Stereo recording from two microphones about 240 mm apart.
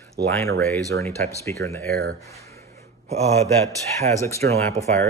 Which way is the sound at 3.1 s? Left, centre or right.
Right.